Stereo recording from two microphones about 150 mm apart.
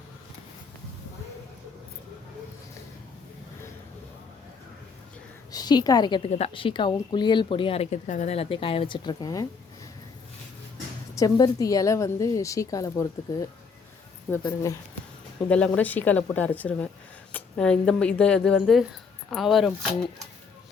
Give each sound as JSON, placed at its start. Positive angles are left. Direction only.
{"t": 5.5, "sound": "a woman's voice", "side_deg": 25}
{"t": 11.1, "sound": "a woman's voice", "side_deg": 25}
{"t": 15.4, "sound": "speech", "side_deg": 10}